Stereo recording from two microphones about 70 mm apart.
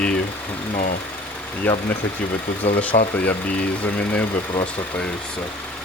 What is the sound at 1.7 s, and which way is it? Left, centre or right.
Speech, left.